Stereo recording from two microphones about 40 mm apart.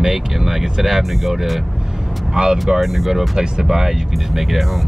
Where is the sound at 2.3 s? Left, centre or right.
Centre.